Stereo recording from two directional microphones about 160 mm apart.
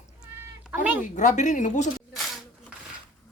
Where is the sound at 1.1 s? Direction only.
50° left (ahead or behind).